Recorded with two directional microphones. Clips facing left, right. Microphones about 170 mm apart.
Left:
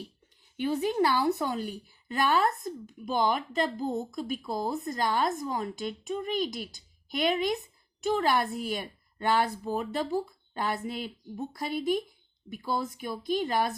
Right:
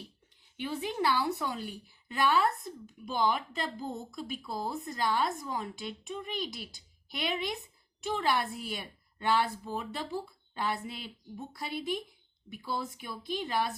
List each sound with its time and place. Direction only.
0.5 s speech: 45° left (ahead or behind)